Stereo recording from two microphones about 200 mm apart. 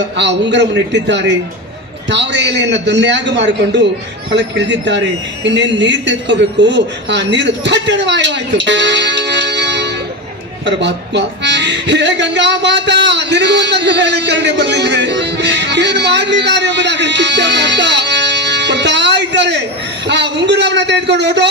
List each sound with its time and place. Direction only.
0.2 s a man's voice: 60° right (ahead or behind)